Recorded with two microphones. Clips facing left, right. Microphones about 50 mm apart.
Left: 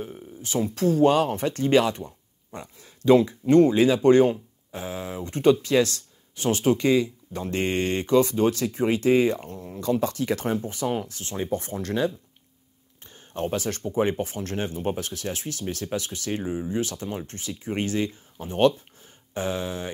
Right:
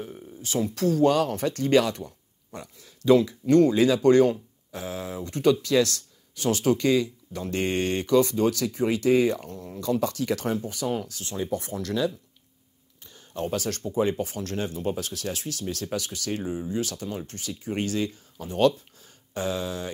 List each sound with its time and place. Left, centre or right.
0.4 s speech: left
13.0 s a sound: left
13.8 s speech: left